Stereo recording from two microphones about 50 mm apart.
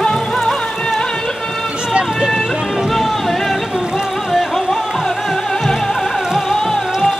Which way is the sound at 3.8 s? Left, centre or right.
Centre.